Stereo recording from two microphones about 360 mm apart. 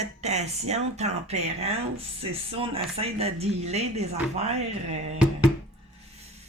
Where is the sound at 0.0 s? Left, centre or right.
Centre.